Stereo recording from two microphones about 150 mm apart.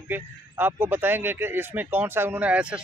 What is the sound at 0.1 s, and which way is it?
Speech, 15° right (ahead or behind).